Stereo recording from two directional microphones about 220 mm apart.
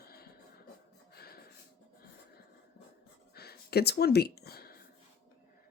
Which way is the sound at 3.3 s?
45° left (ahead or behind).